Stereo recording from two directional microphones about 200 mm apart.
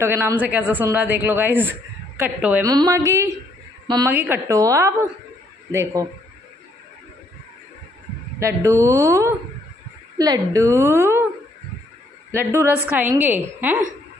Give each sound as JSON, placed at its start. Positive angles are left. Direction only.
{"t": 0.0, "sound": "a man's voice", "side_deg": -10}
{"t": 4.1, "sound": "a man's voice", "side_deg": -10}
{"t": 8.4, "sound": "a man's voice", "side_deg": -15}
{"t": 12.3, "sound": "a man's voice", "side_deg": -15}